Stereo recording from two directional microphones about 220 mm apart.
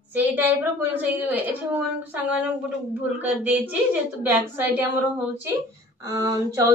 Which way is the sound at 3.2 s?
10° right (ahead or behind).